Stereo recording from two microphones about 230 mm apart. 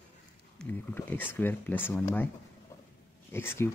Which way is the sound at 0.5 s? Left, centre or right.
Centre.